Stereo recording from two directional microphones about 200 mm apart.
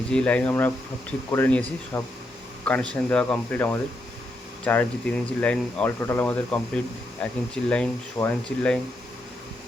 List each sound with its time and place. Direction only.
0.1 s speech: 5° left (ahead or behind)